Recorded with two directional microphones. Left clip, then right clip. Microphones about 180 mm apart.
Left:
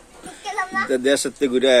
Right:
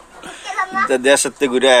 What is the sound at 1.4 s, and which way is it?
Speech, 40° right (ahead or behind).